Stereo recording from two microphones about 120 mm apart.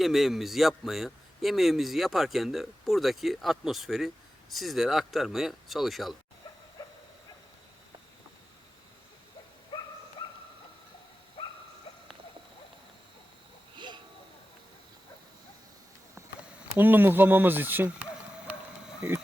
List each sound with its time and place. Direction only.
0.0 s speech: centre (ahead or behind)
6.8 s dog: 25° left (ahead or behind)
10.2 s dog: 40° left (ahead or behind)
11.4 s dog: 50° left (ahead or behind)
13.7 s a sound: 40° right (ahead or behind)
16.7 s speech: 15° right (ahead or behind)